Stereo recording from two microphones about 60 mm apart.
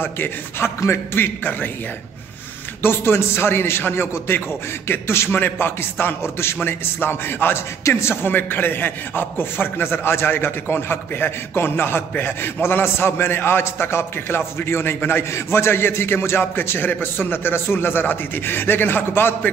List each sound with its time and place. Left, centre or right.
0.0 s a man's voice: left
2.8 s a man's voice: left